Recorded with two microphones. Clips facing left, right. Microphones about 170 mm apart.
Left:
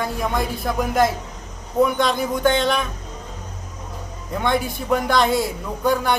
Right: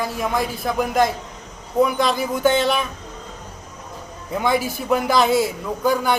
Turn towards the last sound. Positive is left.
turn(degrees=0)  # may be behind; listen again after turning